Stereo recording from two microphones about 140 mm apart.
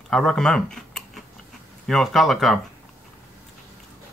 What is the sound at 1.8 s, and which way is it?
Speech, centre (ahead or behind).